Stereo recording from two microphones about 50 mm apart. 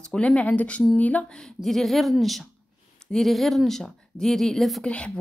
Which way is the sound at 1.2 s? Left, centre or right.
Centre.